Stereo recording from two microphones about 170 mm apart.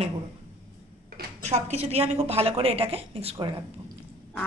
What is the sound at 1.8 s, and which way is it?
A woman's voice, 35° right (ahead or behind).